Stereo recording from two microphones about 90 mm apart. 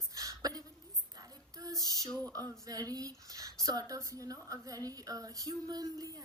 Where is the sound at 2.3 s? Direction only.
40° right (ahead or behind).